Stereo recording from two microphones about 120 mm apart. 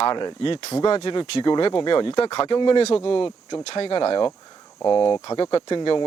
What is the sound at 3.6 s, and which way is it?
Speech, 55° left (ahead or behind).